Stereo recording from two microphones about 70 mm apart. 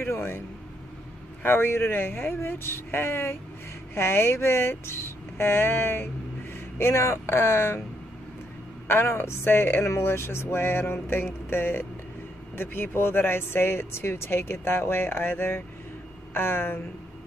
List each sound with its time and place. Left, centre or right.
0.0 s a sound: left
1.4 s speech: left
8.8 s speech: left